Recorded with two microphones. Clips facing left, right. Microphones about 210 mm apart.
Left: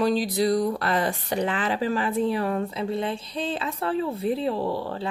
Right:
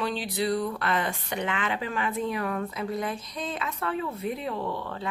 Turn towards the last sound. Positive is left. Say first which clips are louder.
# left 5 dB
turn(degrees=35)  # may be behind; listen again after turning